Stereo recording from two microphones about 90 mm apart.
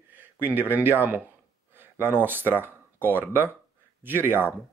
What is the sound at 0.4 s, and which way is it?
Speech, 20° right (ahead or behind).